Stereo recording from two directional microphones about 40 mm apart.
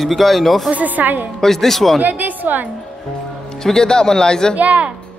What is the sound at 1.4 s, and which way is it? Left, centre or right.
Speech, centre.